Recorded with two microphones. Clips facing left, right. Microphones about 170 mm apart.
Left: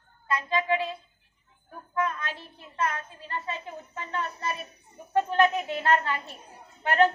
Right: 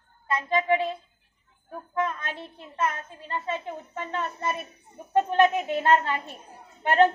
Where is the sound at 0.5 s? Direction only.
20° right (ahead or behind).